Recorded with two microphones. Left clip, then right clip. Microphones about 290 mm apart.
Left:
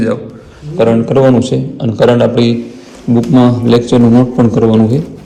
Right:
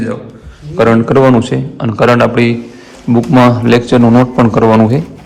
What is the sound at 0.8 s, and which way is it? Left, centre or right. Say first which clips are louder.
Speech: right 1 dB; right.